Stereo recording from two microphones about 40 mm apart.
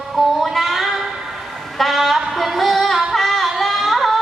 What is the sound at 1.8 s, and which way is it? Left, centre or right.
Female singing, centre.